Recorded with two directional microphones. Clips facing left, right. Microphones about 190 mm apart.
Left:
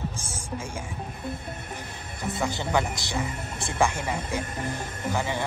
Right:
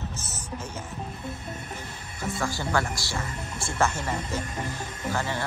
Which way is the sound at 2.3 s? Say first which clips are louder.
Left 2 dB; 20° left (ahead or behind).